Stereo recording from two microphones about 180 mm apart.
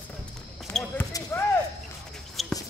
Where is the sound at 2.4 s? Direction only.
Centre (ahead or behind).